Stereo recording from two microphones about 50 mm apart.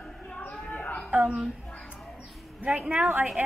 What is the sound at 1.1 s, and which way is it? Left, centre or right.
Speech, right.